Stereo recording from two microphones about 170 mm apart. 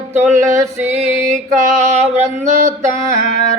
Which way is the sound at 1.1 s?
45° right (ahead or behind).